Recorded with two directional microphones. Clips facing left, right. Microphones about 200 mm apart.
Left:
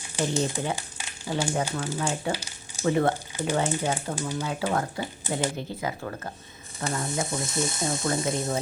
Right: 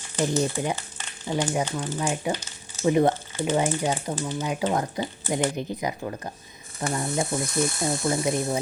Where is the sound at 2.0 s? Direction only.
15° right (ahead or behind).